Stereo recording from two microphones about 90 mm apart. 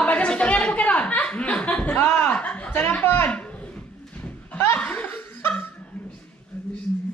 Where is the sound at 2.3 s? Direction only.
15° left (ahead or behind).